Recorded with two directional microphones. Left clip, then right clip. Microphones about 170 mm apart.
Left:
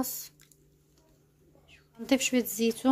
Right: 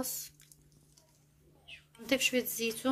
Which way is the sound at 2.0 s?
55° left (ahead or behind).